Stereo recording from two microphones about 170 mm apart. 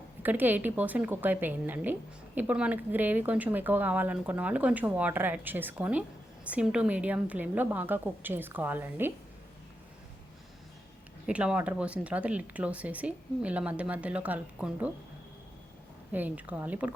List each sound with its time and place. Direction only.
0.2 s speech: 10° right (ahead or behind)
11.3 s speech: 5° right (ahead or behind)
16.1 s speech: 10° right (ahead or behind)